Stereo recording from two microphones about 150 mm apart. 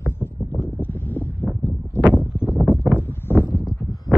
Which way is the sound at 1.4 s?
5° right (ahead or behind).